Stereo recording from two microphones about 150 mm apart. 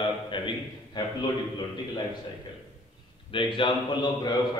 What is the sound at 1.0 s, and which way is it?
Speech, 30° left (ahead or behind).